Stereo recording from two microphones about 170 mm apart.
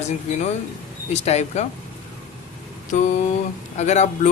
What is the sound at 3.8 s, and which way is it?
Speech, 40° left (ahead or behind).